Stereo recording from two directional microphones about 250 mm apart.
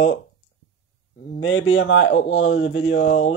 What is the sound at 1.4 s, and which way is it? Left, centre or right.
Speech, left.